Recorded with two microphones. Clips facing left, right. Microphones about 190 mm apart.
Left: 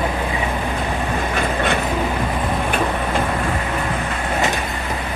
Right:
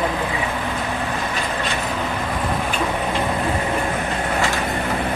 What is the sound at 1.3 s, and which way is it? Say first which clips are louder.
Vehicle: left 5 dB; 55° left (ahead or behind).